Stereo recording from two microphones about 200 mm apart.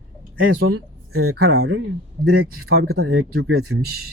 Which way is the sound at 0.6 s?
90° right.